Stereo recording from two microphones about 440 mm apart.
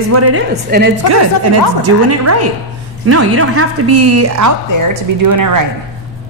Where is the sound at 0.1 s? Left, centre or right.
Right.